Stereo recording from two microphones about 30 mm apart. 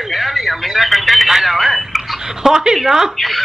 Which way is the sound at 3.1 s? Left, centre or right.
Centre.